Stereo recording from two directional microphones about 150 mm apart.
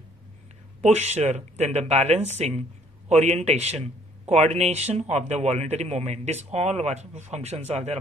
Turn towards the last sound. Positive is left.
turn(degrees=-45)  # may be behind; listen again after turning